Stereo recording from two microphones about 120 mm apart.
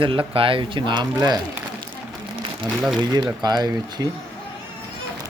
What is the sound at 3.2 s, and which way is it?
Speech, 35° right (ahead or behind).